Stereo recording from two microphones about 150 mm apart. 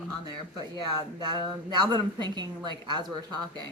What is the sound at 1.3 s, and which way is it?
A woman's voice, 30° right (ahead or behind).